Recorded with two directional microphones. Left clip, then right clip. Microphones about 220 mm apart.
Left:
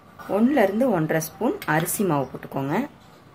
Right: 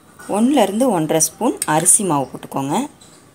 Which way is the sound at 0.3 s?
20° right (ahead or behind).